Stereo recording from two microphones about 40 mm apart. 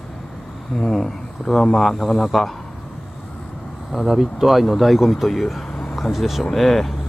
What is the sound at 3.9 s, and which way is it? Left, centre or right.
Speech, centre.